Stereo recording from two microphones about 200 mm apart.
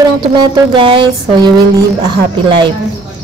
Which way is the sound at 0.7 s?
25° right (ahead or behind).